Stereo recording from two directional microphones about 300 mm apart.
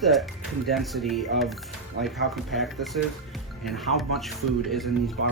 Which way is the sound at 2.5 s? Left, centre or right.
Centre.